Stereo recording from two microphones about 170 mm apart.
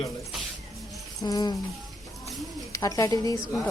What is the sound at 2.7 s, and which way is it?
Speech, 20° left (ahead or behind).